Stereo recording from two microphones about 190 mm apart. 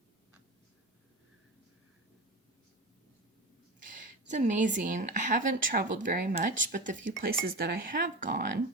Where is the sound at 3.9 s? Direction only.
40° right (ahead or behind).